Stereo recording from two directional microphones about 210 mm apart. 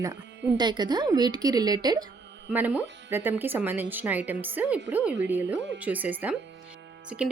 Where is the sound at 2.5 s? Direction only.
10° right (ahead or behind).